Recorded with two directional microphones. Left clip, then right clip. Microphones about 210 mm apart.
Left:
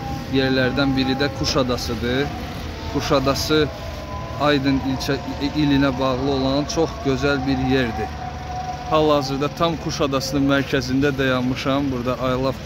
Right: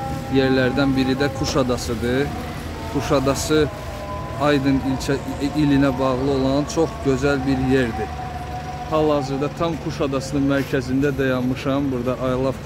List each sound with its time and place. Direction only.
0.3 s speech: 5° right (ahead or behind)
8.9 s speech: 10° left (ahead or behind)